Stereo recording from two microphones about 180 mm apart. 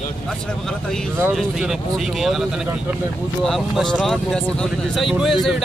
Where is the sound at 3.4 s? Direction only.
5° left (ahead or behind).